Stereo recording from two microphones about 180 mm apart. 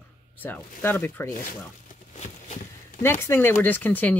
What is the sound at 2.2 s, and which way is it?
Walk, 40° left (ahead or behind).